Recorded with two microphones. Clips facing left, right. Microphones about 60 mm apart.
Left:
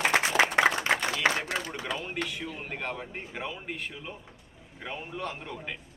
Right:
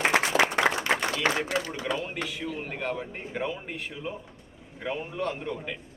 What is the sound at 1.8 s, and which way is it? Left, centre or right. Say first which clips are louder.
A man's voice: right 2 dB; centre.